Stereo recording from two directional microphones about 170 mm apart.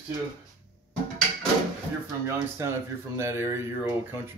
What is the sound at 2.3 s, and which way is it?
Speech, 15° right (ahead or behind).